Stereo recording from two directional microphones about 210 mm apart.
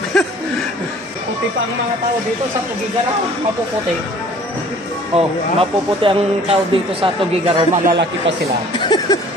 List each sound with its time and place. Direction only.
0.1 s a sound: 5° left (ahead or behind)
5.1 s speech: 25° right (ahead or behind)
8.7 s music: 20° left (ahead or behind)